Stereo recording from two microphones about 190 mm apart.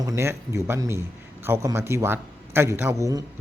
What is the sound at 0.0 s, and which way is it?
Speech, 15° right (ahead or behind).